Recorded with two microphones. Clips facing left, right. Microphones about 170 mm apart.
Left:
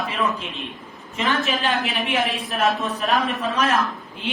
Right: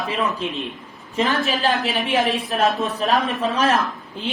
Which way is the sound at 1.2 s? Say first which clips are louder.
Right 2 dB; 35° right (ahead or behind).